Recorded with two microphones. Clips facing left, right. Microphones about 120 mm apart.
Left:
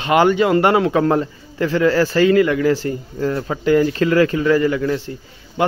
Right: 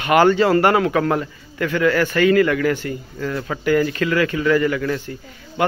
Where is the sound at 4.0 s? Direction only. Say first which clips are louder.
Left 4 dB; 35° left (ahead or behind).